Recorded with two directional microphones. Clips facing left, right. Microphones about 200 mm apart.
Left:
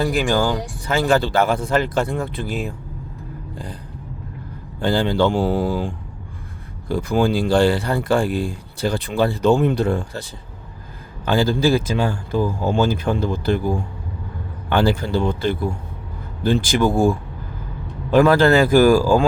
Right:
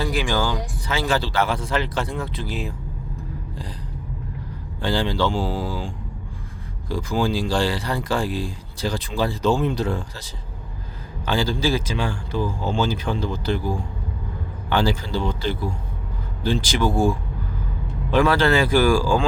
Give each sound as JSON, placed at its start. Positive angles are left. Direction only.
{"t": 0.0, "sound": "speech", "side_deg": 50}
{"t": 4.8, "sound": "speech", "side_deg": 55}
{"t": 11.3, "sound": "speech", "side_deg": 50}
{"t": 14.8, "sound": "speech", "side_deg": 55}
{"t": 18.1, "sound": "speech", "side_deg": 45}